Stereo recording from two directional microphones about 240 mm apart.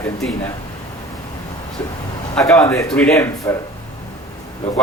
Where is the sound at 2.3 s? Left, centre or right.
Centre.